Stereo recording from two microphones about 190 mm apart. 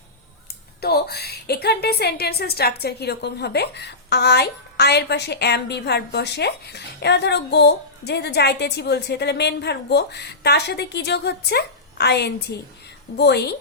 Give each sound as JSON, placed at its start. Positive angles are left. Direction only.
{"t": 0.8, "sound": "a woman's voice", "side_deg": 55}